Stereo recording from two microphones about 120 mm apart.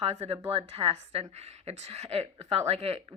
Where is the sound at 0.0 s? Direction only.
60° right (ahead or behind).